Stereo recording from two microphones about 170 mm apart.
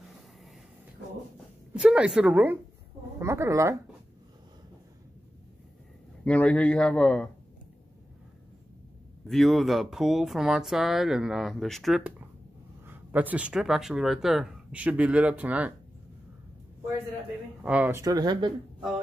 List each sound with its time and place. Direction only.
1.7 s speech: 5° right (ahead or behind)
6.2 s a man's voice: 10° left (ahead or behind)
9.3 s speech: centre (ahead or behind)
12.8 s speech: 10° right (ahead or behind)
17.6 s speech: 10° right (ahead or behind)
18.0 s speech: 25° right (ahead or behind)